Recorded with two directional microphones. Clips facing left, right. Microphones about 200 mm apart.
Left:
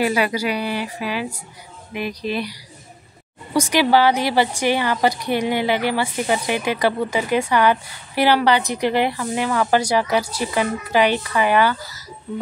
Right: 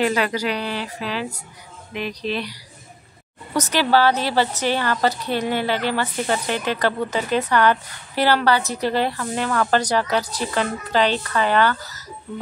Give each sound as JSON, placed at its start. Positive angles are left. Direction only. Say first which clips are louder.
{"t": 0.0, "sound": "a woman's voice", "louder": "left 1 dB", "side_deg": 10}
{"t": 3.5, "sound": "a woman's voice", "louder": "left 2 dB", "side_deg": 10}